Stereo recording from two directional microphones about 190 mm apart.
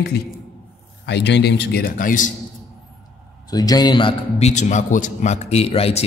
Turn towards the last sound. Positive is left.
turn(degrees=30)  # may be behind; listen again after turning